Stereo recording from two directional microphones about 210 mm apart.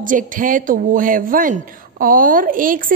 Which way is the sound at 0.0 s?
40° right (ahead or behind).